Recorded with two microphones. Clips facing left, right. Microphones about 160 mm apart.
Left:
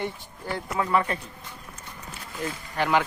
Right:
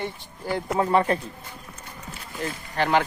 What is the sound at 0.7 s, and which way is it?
Speech, 30° right (ahead or behind).